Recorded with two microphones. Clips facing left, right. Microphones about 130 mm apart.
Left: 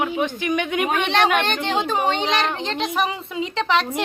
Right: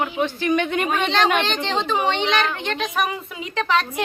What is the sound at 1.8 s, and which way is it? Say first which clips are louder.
A woman's voice: even; 45° left (ahead or behind).